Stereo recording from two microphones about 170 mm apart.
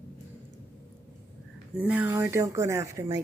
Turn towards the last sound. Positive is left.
turn(degrees=-20)  # may be behind; listen again after turning